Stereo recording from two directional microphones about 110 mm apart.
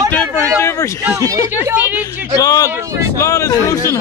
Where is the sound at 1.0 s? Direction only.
30° right (ahead or behind).